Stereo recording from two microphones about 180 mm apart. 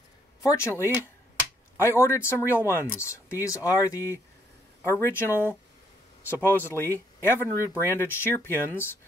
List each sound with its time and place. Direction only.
0.4 s speech: 15° left (ahead or behind)
6.3 s speech: 10° right (ahead or behind)
6.7 s speech: 10° left (ahead or behind)